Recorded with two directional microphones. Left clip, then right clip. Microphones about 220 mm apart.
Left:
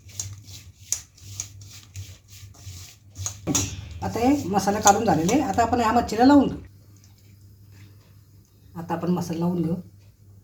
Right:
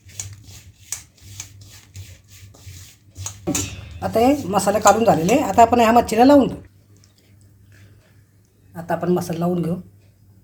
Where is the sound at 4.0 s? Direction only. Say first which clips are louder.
Right 6 dB; 35° right (ahead or behind).